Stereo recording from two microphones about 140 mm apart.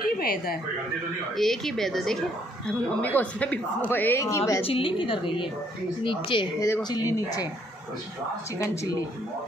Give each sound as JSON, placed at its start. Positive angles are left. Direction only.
{"t": 0.0, "sound": "speech", "side_deg": 90}
{"t": 1.3, "sound": "a woman's voice", "side_deg": 0}
{"t": 4.6, "sound": "a woman's voice", "side_deg": 40}
{"t": 6.6, "sound": "speech", "side_deg": 25}